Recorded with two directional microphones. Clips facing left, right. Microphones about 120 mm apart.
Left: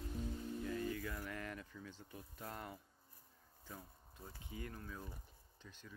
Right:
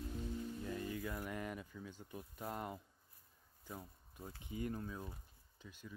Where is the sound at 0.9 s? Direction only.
20° right (ahead or behind).